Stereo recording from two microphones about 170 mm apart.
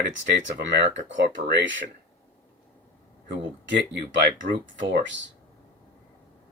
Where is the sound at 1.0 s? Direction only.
90° right.